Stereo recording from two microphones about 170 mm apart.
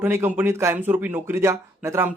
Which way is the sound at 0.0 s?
15° right (ahead or behind).